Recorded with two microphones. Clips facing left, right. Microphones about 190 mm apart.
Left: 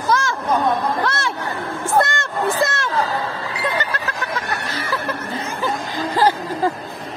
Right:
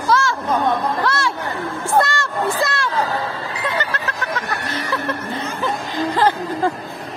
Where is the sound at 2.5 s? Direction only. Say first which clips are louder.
Left 1 dB; 20° left (ahead or behind).